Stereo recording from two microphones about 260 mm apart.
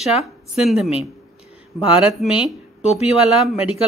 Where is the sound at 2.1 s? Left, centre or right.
Centre.